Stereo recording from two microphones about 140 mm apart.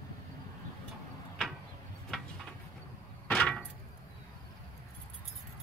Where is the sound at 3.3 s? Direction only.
5° left (ahead or behind).